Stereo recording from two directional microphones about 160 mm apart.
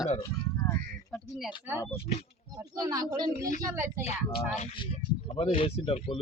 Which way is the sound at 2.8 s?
25° right (ahead or behind).